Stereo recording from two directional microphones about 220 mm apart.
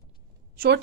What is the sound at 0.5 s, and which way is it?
Speech, 45° right (ahead or behind).